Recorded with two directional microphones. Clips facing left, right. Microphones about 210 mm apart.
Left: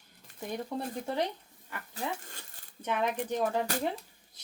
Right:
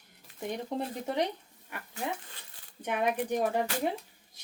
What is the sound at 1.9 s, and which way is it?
Speech, 45° left (ahead or behind).